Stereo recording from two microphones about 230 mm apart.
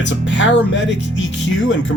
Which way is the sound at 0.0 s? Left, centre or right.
Left.